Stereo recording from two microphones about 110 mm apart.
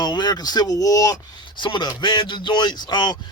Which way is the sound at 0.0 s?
40° left (ahead or behind).